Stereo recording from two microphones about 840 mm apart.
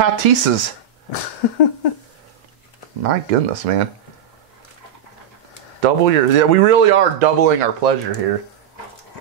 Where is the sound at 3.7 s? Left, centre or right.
Right.